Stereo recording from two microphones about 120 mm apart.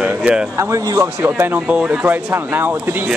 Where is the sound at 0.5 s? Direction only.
25° right (ahead or behind).